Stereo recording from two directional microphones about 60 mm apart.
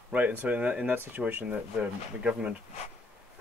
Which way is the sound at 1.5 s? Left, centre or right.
Centre.